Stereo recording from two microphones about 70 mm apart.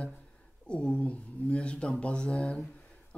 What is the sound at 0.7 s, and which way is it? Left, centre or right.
Speech, centre.